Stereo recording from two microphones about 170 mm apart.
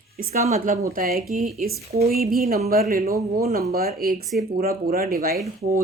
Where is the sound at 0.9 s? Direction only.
60° right (ahead or behind).